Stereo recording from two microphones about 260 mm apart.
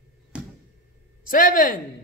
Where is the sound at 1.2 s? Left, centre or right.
Left.